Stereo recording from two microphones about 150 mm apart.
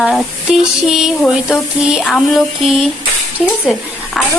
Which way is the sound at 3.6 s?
Centre (ahead or behind).